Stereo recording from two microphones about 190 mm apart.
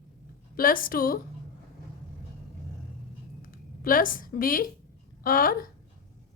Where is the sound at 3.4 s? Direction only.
45° left (ahead or behind).